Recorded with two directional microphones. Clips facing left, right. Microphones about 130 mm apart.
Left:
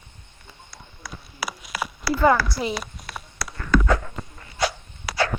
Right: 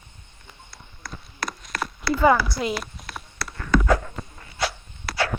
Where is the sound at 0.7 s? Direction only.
5° left (ahead or behind).